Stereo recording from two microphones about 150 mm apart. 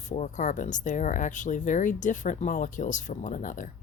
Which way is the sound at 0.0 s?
55° left (ahead or behind).